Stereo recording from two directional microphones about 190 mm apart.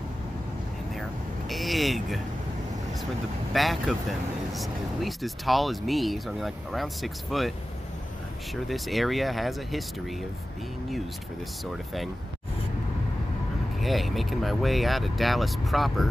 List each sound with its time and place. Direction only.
1.5 s vehicle: centre (ahead or behind)
3.5 s speech: centre (ahead or behind)
8.6 s speech: centre (ahead or behind)
11.6 s speech: centre (ahead or behind)
13.7 s speech: centre (ahead or behind)